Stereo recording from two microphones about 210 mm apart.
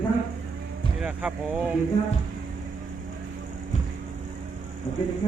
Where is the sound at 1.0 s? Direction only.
5° right (ahead or behind).